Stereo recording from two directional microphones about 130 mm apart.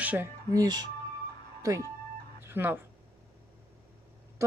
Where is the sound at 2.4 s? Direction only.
15° right (ahead or behind).